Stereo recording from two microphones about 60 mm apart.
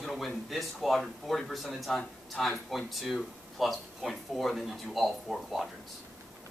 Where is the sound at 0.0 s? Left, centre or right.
Centre.